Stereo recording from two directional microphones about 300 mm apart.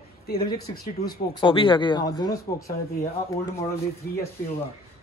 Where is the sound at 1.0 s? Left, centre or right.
Centre.